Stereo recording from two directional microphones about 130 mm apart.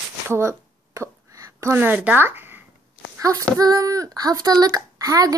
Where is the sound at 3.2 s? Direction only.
25° right (ahead or behind).